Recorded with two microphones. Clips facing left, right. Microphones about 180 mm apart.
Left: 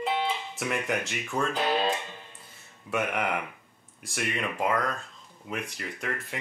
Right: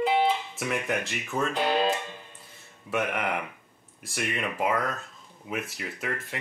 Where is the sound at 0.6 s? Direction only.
Centre (ahead or behind).